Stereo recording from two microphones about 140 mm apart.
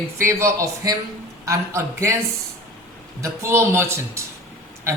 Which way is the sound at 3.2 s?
20° right (ahead or behind).